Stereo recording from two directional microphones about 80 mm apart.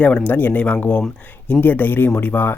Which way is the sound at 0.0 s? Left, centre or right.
Centre.